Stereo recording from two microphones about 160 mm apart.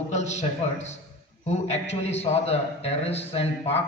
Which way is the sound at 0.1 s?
45° left (ahead or behind).